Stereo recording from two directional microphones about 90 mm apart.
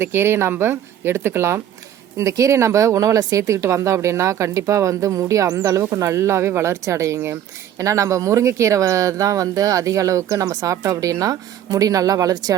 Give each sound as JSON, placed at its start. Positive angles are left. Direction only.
{"t": 0.0, "sound": "speech", "side_deg": -25}
{"t": 5.8, "sound": "speech", "side_deg": -30}